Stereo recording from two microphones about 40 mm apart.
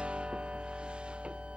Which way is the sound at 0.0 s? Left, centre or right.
Right.